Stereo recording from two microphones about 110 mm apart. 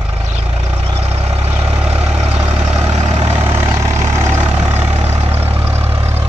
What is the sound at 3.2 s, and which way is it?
Vehicle, 20° right (ahead or behind).